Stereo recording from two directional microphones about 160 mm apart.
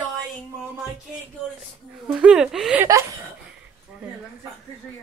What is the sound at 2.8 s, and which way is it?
Chuckle, 20° right (ahead or behind).